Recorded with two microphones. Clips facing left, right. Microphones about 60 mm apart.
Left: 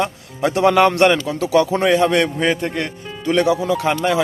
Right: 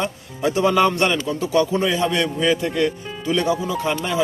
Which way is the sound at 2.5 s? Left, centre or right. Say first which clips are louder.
Right 1 dB; left.